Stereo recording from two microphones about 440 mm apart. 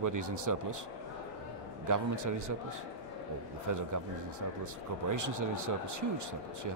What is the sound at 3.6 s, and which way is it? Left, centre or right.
Speech, right.